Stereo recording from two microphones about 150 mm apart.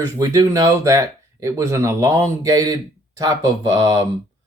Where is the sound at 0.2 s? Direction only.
25° right (ahead or behind).